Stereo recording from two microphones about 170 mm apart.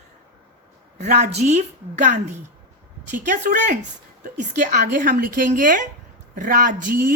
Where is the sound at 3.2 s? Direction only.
45° right (ahead or behind).